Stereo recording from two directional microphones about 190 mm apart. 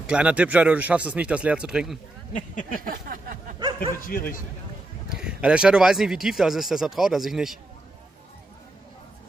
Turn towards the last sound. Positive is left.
turn(degrees=0)  # may be behind; listen again after turning